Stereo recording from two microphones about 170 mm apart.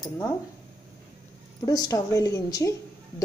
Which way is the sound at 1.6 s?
20° left (ahead or behind).